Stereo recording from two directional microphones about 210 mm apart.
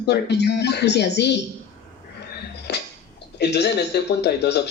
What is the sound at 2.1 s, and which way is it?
Music, 55° left (ahead or behind).